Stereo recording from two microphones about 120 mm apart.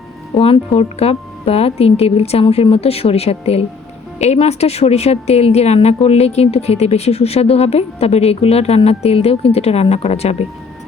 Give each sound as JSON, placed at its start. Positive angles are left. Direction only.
{"t": 0.3, "sound": "a woman's voice", "side_deg": 55}